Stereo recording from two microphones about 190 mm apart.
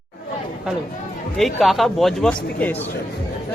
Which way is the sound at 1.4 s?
Centre (ahead or behind).